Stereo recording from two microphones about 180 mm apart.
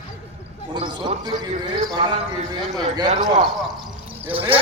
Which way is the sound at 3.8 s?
10° right (ahead or behind).